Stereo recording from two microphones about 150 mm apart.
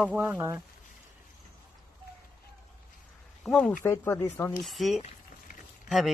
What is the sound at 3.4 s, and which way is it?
Speech, 5° left (ahead or behind).